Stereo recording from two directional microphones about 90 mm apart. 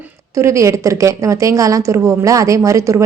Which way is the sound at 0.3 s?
35° right (ahead or behind).